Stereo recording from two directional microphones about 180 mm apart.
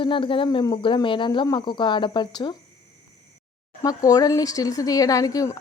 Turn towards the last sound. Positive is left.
turn(degrees=20)  # may be behind; listen again after turning